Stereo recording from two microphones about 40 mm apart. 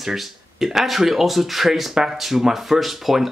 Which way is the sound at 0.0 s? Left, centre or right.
Centre.